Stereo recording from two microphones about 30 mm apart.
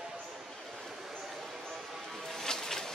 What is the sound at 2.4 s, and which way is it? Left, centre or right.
Boat, centre.